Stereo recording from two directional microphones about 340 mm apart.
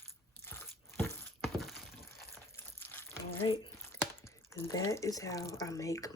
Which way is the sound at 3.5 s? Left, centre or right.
Centre.